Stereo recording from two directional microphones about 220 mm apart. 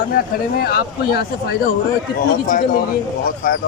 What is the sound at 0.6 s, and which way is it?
Speech, 45° left (ahead or behind).